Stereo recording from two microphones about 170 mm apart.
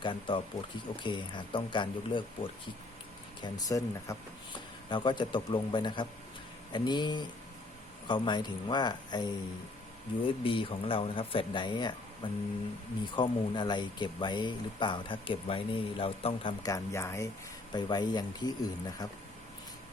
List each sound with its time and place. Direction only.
0.0 s speech: 30° left (ahead or behind)
10.2 s speech: 30° left (ahead or behind)